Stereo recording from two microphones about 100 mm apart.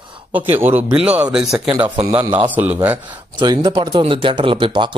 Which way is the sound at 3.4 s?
45° right (ahead or behind).